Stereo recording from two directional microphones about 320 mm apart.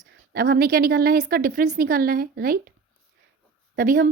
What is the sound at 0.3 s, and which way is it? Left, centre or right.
Speech, right.